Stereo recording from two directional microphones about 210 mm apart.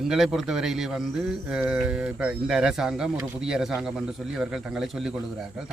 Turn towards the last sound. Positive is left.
turn(degrees=0)  # may be behind; listen again after turning